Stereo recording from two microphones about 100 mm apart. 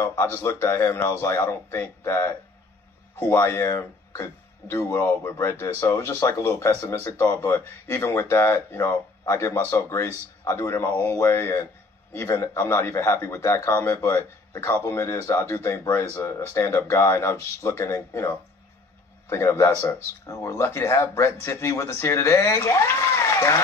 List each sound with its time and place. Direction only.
0.0 s speech: 25° left (ahead or behind)
10.9 s speech: 15° left (ahead or behind)